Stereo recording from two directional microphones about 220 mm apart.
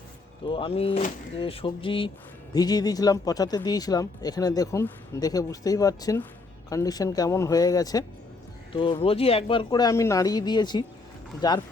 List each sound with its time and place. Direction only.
0.4 s speech: 25° left (ahead or behind)